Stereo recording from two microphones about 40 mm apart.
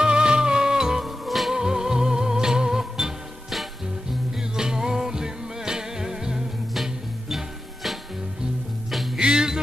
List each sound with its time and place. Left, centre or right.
0.0 s music: centre
1.0 s music: centre
1.5 s music: centre
6.7 s music: centre
9.2 s music: centre